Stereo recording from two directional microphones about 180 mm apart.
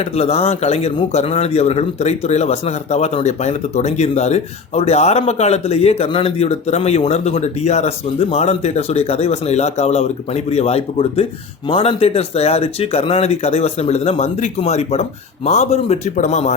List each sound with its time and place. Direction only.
0.2 s a man's voice: 35° left (ahead or behind)